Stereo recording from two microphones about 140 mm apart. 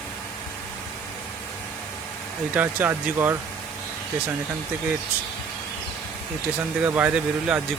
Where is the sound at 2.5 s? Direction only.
15° right (ahead or behind).